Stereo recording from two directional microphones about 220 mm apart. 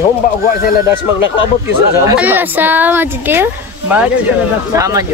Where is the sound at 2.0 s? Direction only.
10° right (ahead or behind).